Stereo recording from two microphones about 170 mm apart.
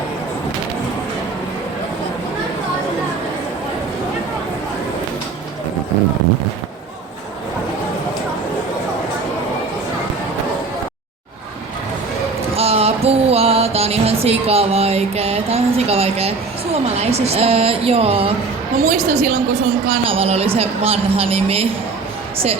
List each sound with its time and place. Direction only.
12.5 s music: 35° right (ahead or behind)
17.0 s a woman's voice: 40° right (ahead or behind)